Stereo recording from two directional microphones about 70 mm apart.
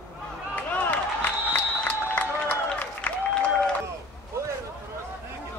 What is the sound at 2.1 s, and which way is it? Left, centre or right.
Applause, left.